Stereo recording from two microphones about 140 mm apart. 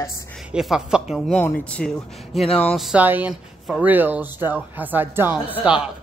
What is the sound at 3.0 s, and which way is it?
Speech, 10° right (ahead or behind).